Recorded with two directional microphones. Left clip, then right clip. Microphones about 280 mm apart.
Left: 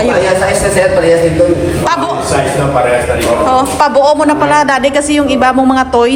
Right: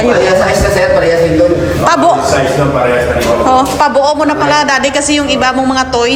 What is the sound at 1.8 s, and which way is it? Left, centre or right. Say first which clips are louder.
Speech: right 8 dB; right.